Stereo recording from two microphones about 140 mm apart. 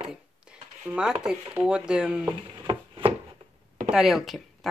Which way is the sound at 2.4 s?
35° right (ahead or behind).